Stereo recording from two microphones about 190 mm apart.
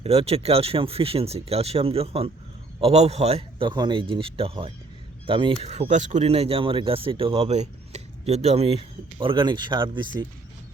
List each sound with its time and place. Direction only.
0.0 s speech: 30° right (ahead or behind)